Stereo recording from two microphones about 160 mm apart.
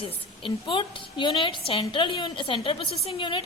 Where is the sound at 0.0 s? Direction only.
35° left (ahead or behind).